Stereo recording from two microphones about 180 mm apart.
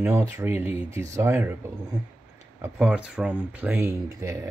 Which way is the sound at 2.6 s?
5° right (ahead or behind).